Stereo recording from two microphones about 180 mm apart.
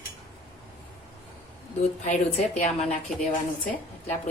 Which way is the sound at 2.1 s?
40° left (ahead or behind).